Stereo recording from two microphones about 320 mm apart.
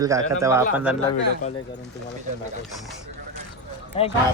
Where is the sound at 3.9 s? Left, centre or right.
Centre.